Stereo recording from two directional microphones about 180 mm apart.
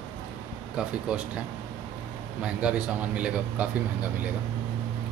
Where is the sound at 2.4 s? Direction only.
5° right (ahead or behind).